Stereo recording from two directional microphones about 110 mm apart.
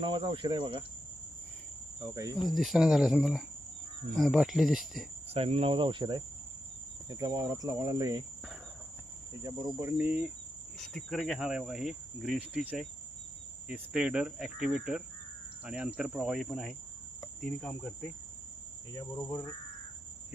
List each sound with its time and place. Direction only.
0.0 s speech: 50° right (ahead or behind)
2.1 s cricket: 30° right (ahead or behind)
2.4 s cricket: centre (ahead or behind)
5.3 s speech: 65° right (ahead or behind); by 6.2 s 45° right (ahead or behind)
7.1 s cricket: 35° right (ahead or behind)
9.8 s speech: 15° right (ahead or behind)
10.8 s cricket: 5° left (ahead or behind)
13.7 s speech: 10° right (ahead or behind)
15.6 s cricket: 10° right (ahead or behind); by 18.1 s 5° left (ahead or behind)
18.9 s cricket: 25° left (ahead or behind)